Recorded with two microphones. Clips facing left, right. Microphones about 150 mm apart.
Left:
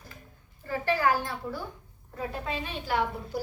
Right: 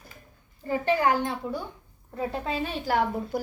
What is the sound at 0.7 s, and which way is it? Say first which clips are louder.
A woman's voice: right 3 dB; 20° right (ahead or behind).